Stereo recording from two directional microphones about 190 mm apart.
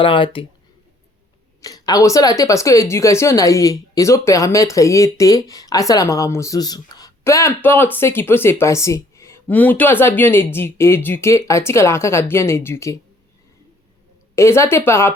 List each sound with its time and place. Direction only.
0.0 s speech: 25° left (ahead or behind)
1.6 s speech: 20° left (ahead or behind)
14.3 s speech: 15° left (ahead or behind)